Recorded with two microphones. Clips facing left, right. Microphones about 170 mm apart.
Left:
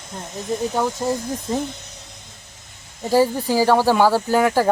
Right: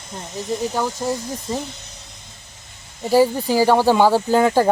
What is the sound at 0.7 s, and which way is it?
Speech, centre (ahead or behind).